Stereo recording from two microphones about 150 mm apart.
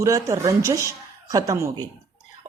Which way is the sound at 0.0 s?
20° right (ahead or behind).